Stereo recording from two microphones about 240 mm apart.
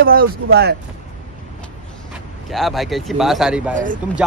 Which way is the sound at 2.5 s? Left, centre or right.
Centre.